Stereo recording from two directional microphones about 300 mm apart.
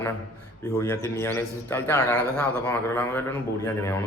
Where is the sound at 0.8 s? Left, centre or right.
Centre.